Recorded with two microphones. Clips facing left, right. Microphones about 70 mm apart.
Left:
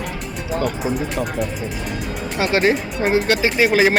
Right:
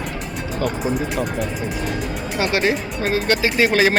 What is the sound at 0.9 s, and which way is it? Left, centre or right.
Speech, centre.